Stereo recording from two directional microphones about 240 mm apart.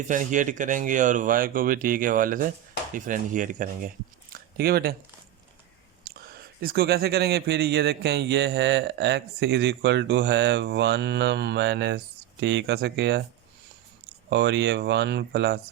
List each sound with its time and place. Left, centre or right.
0.1 s speech: right
6.1 s a man's voice: right
14.3 s a man's voice: right